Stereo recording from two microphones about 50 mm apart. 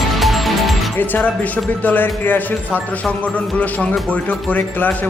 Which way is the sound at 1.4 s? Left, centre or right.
Left.